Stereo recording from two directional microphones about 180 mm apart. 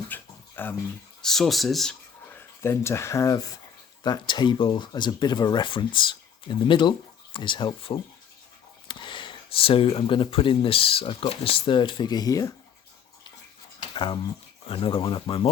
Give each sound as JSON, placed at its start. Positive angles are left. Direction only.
{"t": 0.1, "sound": "a sound", "side_deg": 10}
{"t": 1.2, "sound": "speech", "side_deg": 0}
{"t": 13.9, "sound": "speech", "side_deg": 25}